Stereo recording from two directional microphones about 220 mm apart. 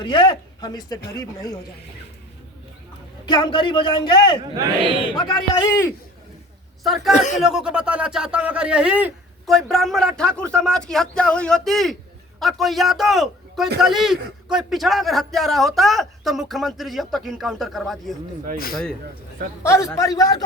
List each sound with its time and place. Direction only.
0.0 s a man's voice: 20° left (ahead or behind)
3.2 s a man's voice: 20° left (ahead or behind)
6.8 s speech: centre (ahead or behind)
7.2 s a man's voice: 35° left (ahead or behind)
7.4 s speech: 5° right (ahead or behind)
18.5 s a man's voice: 40° left (ahead or behind)
19.6 s a man's voice: 10° left (ahead or behind)